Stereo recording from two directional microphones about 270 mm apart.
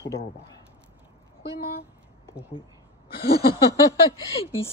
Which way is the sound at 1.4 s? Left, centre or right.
Left.